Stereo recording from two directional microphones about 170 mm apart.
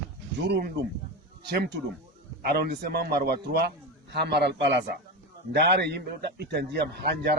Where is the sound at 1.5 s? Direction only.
75° right (ahead or behind).